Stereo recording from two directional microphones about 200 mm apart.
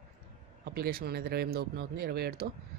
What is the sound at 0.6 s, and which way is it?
Speech, 50° right (ahead or behind).